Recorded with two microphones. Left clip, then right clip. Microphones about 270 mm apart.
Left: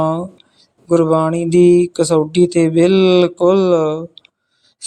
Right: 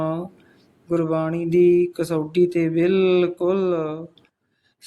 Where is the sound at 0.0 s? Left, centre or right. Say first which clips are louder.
Left 8 dB; centre.